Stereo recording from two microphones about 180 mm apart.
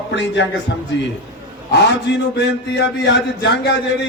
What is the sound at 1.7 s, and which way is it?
A man's voice, 70° left (ahead or behind).